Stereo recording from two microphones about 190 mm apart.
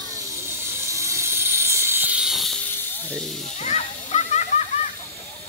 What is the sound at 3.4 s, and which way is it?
Snake, 35° left (ahead or behind).